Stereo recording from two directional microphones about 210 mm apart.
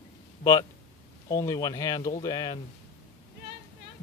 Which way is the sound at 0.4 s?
15° left (ahead or behind).